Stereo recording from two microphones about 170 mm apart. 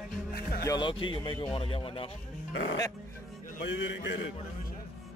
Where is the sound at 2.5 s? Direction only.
90° left.